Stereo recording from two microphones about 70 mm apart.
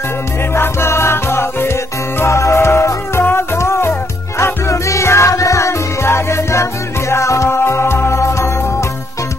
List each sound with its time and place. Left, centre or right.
0.6 s music: left